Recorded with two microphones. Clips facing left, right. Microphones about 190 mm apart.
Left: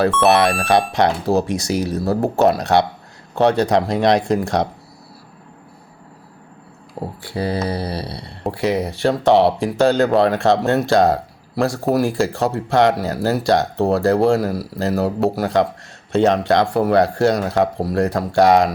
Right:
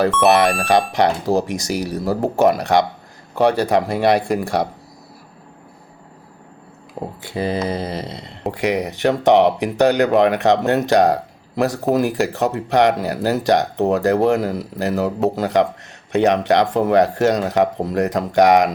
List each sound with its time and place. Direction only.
0.3 s speech: 15° right (ahead or behind)
7.2 s speech: 20° right (ahead or behind)